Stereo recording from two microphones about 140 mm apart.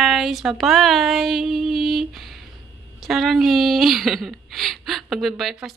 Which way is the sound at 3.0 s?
Centre (ahead or behind).